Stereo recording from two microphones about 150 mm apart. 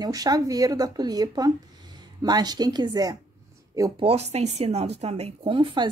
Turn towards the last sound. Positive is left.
turn(degrees=-35)  # may be behind; listen again after turning